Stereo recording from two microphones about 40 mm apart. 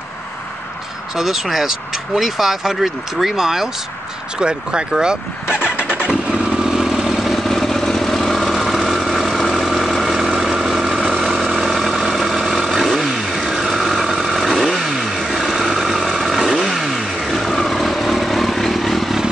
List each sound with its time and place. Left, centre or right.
1.1 s speech: centre
4.4 s speech: right
5.5 s vehicle: left
6.6 s vehicle: centre
7.2 s vehicle: centre
13.6 s motorcycle: centre
16.8 s vehicle: centre